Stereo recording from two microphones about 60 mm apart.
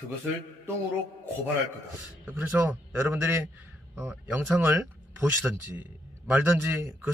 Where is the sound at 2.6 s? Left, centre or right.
Right.